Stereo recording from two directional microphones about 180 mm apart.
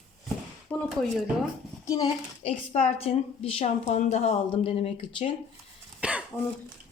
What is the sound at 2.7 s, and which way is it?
Speech, 35° left (ahead or behind).